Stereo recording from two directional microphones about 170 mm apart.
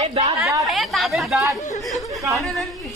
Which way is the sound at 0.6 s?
Centre (ahead or behind).